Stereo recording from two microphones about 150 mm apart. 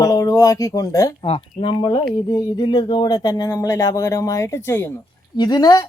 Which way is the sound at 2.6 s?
30° left (ahead or behind).